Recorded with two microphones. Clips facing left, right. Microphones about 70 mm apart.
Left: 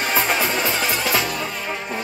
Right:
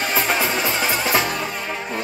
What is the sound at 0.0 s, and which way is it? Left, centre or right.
Music, centre.